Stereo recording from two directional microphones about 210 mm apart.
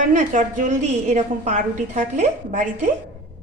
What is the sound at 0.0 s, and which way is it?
A woman's voice, 35° right (ahead or behind).